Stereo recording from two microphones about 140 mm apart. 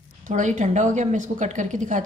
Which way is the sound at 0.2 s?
60° right (ahead or behind).